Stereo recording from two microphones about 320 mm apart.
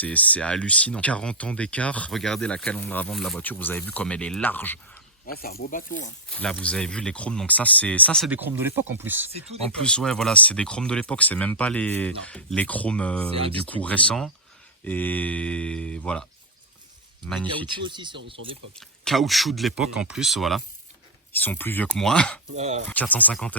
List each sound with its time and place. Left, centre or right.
0.0 s speech: centre
5.2 s speech: left
6.3 s speech: centre
17.2 s speech: centre
17.7 s speech: centre
18.8 s speech: centre
22.5 s speech: centre
22.9 s speech: centre